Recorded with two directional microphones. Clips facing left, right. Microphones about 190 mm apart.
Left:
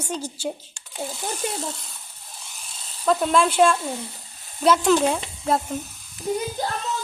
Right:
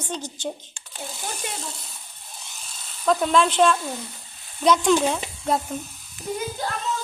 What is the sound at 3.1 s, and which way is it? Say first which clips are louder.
A woman's voice: even; centre (ahead or behind).